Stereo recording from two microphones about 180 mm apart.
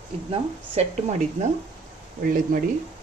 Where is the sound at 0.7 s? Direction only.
35° right (ahead or behind).